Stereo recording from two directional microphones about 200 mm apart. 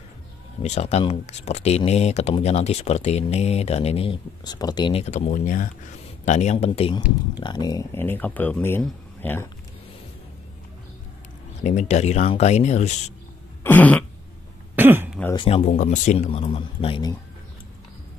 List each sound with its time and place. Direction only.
0.6 s speech: 35° left (ahead or behind); by 9.5 s 10° left (ahead or behind)
11.6 s speech: 35° left (ahead or behind)
13.7 s speech: 10° left (ahead or behind)
14.8 s throat clearing: 10° right (ahead or behind)
15.3 s speech: 25° left (ahead or behind)